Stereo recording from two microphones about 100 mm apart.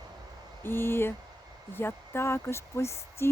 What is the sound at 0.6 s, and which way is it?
Speech, 25° left (ahead or behind).